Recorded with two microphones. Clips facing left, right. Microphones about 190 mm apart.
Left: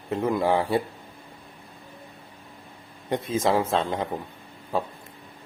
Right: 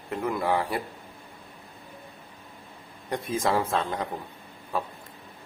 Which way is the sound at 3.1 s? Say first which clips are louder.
Left 3 dB; 25° left (ahead or behind).